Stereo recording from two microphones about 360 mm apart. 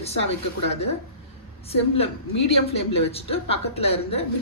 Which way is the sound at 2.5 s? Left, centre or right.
Centre.